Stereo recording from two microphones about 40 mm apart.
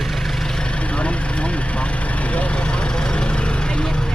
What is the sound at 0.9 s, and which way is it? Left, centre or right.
Vehicle, left.